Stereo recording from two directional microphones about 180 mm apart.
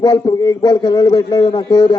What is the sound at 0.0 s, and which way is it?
A man's voice, 25° left (ahead or behind).